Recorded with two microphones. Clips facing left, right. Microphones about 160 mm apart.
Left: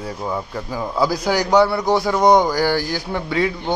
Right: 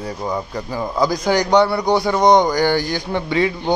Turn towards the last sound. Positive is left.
turn(degrees=0)  # may be behind; listen again after turning